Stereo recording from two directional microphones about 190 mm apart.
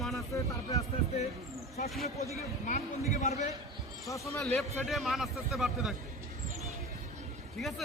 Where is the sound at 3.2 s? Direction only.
40° left (ahead or behind).